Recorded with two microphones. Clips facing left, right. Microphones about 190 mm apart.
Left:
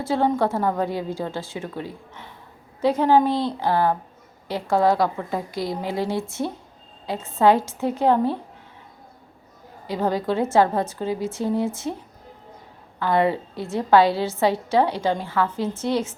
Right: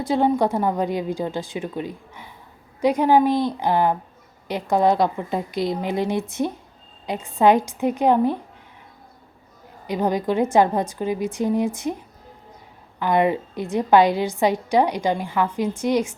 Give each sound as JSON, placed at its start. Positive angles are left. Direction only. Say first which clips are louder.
{"t": 0.0, "sound": "a woman's voice", "louder": "right 2 dB", "side_deg": -15}
{"t": 9.8, "sound": "a woman's voice", "louder": "right 1 dB", "side_deg": -15}